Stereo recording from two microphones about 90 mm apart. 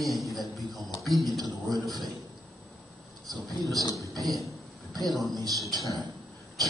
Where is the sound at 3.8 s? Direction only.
35° left (ahead or behind).